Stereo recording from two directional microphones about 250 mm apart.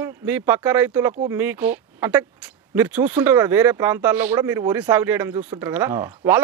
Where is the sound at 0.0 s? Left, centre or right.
Centre.